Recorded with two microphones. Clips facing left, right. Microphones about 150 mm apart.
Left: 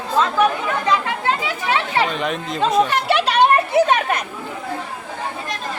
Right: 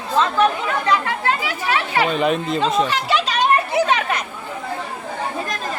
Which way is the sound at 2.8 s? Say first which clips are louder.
Left 2 dB; 60° left (ahead or behind).